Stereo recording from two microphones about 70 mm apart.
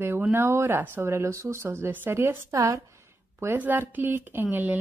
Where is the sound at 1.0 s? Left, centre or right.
Right.